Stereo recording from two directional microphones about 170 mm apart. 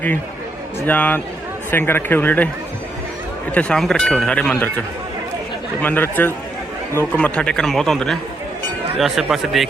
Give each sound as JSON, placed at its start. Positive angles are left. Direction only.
{"t": 0.8, "sound": "speech", "side_deg": 10}
{"t": 3.5, "sound": "speech", "side_deg": 5}
{"t": 5.8, "sound": "speech", "side_deg": 10}